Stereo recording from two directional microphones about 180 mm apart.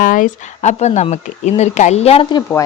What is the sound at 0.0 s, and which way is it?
Speech, 50° left (ahead or behind).